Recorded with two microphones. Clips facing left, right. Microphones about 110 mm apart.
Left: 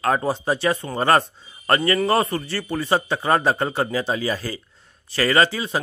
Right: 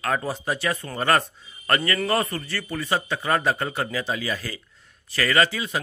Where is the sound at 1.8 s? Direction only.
15° left (ahead or behind).